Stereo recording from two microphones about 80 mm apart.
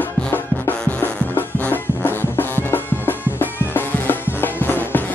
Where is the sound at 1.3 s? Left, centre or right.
Left.